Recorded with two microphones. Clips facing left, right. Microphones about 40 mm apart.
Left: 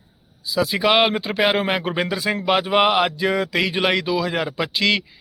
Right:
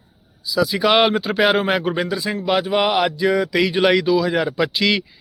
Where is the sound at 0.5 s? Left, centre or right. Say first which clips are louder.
Right 2 dB; left.